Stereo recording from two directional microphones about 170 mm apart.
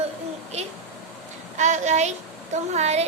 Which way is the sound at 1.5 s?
45° right (ahead or behind).